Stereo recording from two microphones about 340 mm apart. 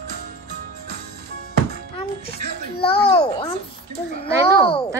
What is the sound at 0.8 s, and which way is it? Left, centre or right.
Music, right.